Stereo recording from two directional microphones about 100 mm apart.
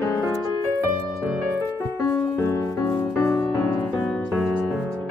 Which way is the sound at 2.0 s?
25° left (ahead or behind).